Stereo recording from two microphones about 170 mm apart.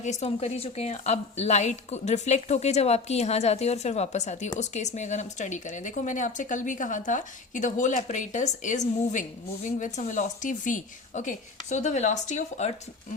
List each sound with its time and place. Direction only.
0.0 s a woman's voice: 40° left (ahead or behind)